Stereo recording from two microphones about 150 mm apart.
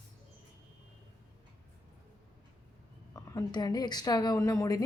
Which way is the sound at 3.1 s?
20° left (ahead or behind).